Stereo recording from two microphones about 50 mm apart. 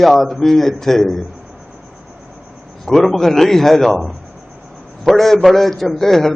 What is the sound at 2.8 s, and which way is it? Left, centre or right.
A man's voice, centre.